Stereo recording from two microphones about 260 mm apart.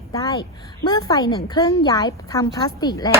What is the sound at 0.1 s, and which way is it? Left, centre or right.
A woman's voice, centre.